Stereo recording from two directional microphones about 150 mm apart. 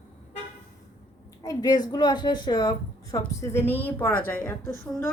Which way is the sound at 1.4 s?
25° left (ahead or behind).